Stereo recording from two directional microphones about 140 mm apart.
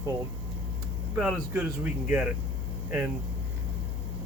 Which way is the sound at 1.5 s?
15° right (ahead or behind).